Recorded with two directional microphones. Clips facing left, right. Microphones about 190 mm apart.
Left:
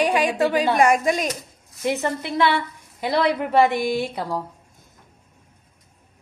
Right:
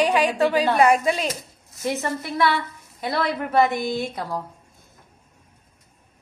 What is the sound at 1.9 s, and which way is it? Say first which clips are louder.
A woman's voice: left 2 dB; 15° left (ahead or behind).